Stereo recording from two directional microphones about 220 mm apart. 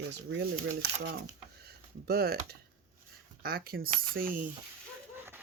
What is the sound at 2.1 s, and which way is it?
Speech, 45° right (ahead or behind).